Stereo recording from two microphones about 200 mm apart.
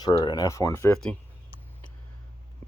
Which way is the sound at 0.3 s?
15° left (ahead or behind).